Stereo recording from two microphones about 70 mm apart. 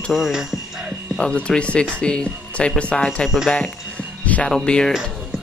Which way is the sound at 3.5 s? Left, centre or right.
Centre.